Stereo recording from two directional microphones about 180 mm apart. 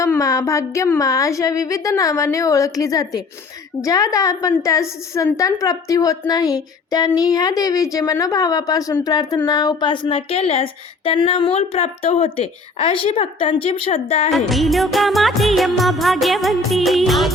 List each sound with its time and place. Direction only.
0.0 s a woman's voice: 20° left (ahead or behind); by 14.3 s 35° left (ahead or behind)
14.3 s music: centre (ahead or behind)